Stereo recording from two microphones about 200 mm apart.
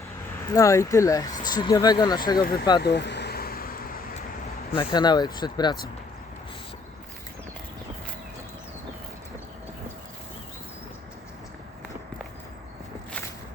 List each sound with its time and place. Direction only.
0.5 s speech: 15° left (ahead or behind)
2.4 s speech: 50° left (ahead or behind)
2.8 s vehicle: 60° left (ahead or behind)
4.7 s speech: 25° left (ahead or behind)